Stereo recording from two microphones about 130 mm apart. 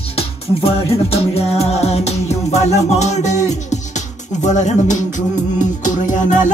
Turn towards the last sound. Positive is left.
turn(degrees=70)  # may be behind; listen again after turning